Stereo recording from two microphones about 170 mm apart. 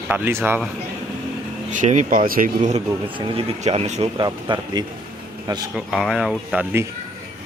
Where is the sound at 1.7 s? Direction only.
45° right (ahead or behind).